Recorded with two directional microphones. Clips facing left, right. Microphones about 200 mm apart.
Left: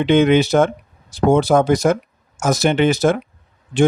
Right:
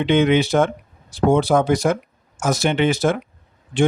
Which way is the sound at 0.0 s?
45° left (ahead or behind).